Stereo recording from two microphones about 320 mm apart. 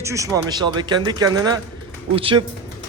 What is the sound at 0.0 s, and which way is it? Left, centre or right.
A man's voice, centre.